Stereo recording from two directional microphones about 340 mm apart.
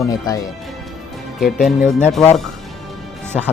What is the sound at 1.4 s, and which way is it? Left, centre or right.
Speech, centre.